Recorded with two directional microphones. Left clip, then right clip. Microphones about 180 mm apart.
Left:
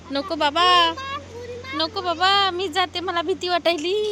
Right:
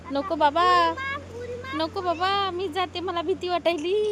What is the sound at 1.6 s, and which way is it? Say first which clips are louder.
Speech: left 3 dB; 25° right (ahead or behind).